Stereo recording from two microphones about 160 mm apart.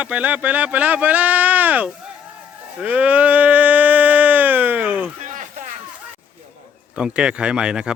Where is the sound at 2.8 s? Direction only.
10° right (ahead or behind).